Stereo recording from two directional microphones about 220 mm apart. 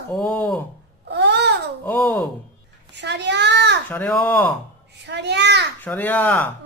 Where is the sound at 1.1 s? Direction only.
50° right (ahead or behind).